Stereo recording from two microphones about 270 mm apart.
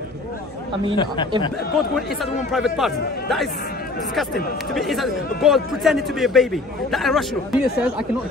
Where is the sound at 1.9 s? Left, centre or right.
Centre.